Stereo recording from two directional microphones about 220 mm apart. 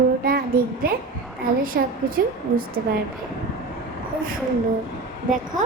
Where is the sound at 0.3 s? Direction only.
40° right (ahead or behind).